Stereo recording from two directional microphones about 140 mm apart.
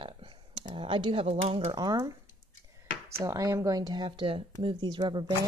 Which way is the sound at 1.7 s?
30° right (ahead or behind).